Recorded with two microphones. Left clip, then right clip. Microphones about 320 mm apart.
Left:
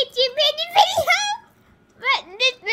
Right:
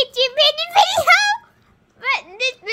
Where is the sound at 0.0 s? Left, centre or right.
Centre.